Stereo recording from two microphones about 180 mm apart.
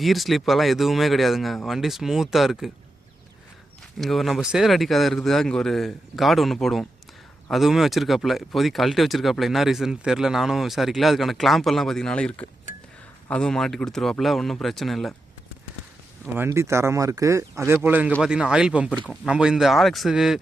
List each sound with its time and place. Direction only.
0.0 s speech: centre (ahead or behind)
3.9 s speech: centre (ahead or behind)
16.2 s speech: 10° right (ahead or behind)